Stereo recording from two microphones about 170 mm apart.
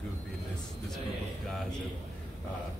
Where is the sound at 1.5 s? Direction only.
5° left (ahead or behind).